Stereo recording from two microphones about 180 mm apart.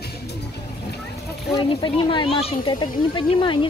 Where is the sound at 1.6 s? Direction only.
25° left (ahead or behind).